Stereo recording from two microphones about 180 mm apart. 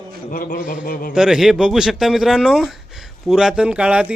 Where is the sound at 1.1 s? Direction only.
5° right (ahead or behind).